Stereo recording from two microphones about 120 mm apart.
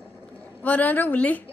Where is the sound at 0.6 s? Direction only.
15° left (ahead or behind).